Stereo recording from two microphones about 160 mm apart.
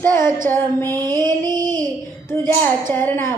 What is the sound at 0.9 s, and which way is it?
Music, 25° right (ahead or behind).